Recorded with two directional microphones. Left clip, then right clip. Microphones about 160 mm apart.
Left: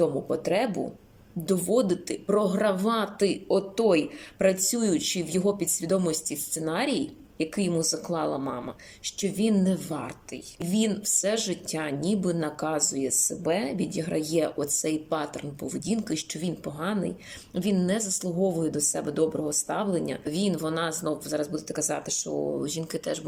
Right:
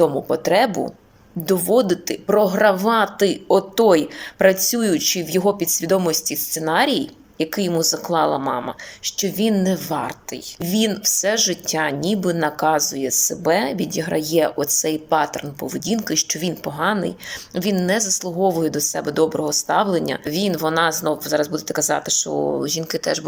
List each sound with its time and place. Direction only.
0.0 s a woman's voice: 15° left (ahead or behind)